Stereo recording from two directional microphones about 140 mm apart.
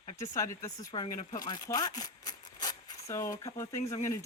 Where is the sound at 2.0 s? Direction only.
30° left (ahead or behind).